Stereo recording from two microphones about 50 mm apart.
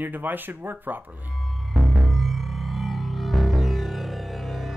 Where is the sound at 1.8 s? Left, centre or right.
Centre.